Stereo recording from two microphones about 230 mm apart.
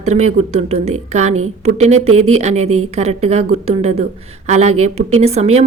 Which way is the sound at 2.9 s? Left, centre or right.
Right.